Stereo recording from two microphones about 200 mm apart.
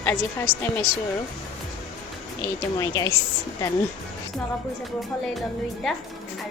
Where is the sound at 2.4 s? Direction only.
15° left (ahead or behind).